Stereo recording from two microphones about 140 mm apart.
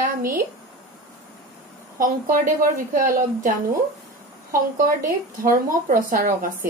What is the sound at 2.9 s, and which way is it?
Speech, 90° right.